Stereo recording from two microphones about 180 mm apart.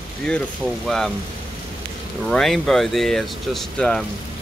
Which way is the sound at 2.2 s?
Centre (ahead or behind).